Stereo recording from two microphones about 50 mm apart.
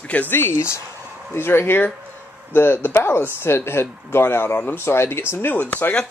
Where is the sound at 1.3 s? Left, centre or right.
Left.